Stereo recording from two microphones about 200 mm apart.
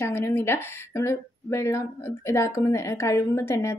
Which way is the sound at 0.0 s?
10° left (ahead or behind).